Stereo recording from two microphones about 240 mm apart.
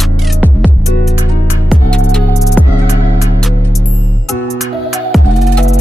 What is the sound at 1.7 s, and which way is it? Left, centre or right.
Music, centre.